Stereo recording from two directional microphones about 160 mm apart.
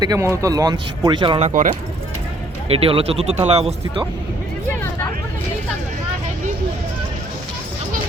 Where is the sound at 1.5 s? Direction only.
55° right (ahead or behind).